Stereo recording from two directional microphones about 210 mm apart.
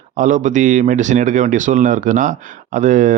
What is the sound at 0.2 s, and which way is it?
Speech, 35° right (ahead or behind).